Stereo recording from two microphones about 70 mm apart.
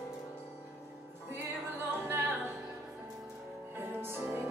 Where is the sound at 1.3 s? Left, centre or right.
Right.